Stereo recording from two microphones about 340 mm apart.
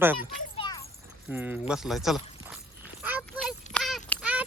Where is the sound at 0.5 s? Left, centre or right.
Centre.